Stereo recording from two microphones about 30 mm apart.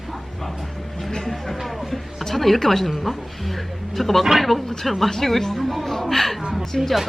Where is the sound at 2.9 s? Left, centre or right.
Centre.